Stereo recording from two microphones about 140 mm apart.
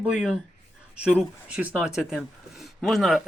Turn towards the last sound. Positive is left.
turn(degrees=0)  # may be behind; listen again after turning